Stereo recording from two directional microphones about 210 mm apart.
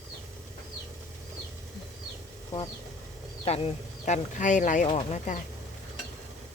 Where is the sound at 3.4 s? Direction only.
30° left (ahead or behind).